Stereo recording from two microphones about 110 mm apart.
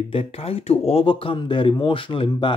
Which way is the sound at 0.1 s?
60° left (ahead or behind).